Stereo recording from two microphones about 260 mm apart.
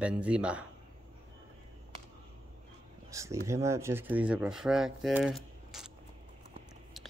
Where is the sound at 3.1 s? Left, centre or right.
Centre.